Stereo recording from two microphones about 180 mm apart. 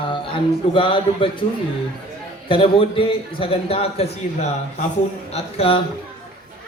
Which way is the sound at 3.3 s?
30° left (ahead or behind).